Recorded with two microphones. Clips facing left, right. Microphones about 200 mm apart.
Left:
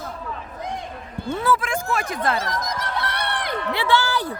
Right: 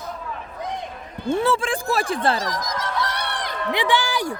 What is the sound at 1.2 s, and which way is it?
Speech, 25° right (ahead or behind).